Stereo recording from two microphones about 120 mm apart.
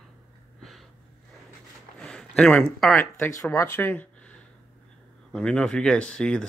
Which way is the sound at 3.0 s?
20° left (ahead or behind).